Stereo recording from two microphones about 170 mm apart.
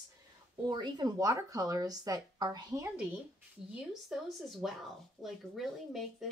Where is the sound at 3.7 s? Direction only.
Centre (ahead or behind).